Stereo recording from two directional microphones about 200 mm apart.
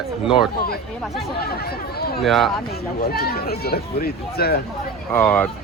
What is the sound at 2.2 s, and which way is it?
Speech, centre (ahead or behind).